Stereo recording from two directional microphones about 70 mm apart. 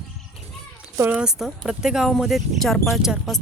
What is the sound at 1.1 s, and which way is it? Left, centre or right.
Speech, centre.